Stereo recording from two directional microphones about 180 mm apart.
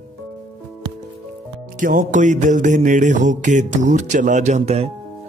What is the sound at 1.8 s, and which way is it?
Mantra, 45° right (ahead or behind).